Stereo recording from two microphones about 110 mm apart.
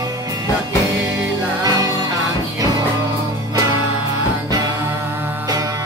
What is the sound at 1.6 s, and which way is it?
Music, 35° right (ahead or behind).